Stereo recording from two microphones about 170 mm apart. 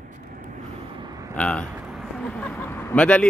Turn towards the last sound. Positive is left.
turn(degrees=5)  # may be behind; listen again after turning